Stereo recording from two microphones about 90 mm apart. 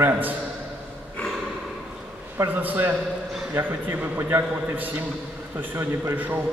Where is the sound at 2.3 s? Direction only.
20° right (ahead or behind).